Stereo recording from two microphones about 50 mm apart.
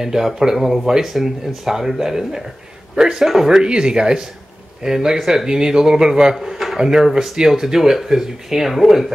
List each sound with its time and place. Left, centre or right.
0.0 s speech: centre
6.3 s a man's voice: centre